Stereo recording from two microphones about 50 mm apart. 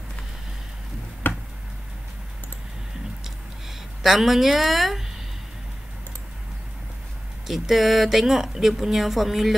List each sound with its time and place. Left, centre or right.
1.2 s tick: left
4.0 s speech: centre
7.4 s speech: centre